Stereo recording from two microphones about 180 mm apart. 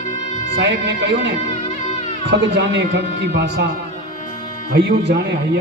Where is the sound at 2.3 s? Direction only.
70° right (ahead or behind).